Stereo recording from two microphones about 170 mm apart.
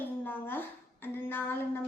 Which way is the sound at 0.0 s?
10° left (ahead or behind).